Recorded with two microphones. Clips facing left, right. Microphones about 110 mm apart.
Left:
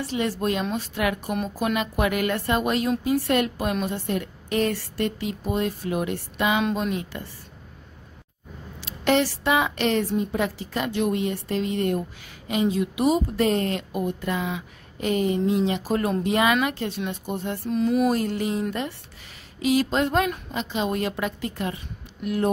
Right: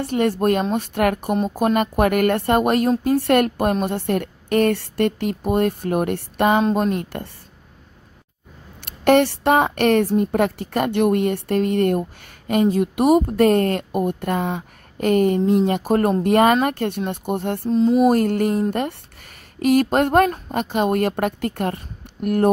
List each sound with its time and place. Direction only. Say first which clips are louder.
0.0 s a woman's voice: right 6 dB; 55° right (ahead or behind)
8.8 s a woman's voice: right 6 dB; 55° right (ahead or behind)
17.6 s mantra: right 6 dB; 30° right (ahead or behind)
18.0 s a woman's voice: right 6 dB; 50° right (ahead or behind)